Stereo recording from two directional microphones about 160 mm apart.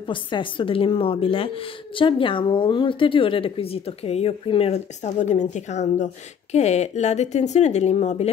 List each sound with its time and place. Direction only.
0.0 s speech: 30° left (ahead or behind)